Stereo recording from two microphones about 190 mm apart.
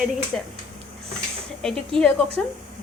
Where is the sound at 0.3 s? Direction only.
5° left (ahead or behind).